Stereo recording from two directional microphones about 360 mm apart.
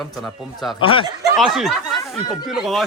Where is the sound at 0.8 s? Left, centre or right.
Centre.